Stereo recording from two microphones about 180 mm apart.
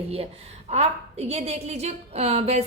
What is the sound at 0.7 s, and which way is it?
A woman's voice, 35° right (ahead or behind).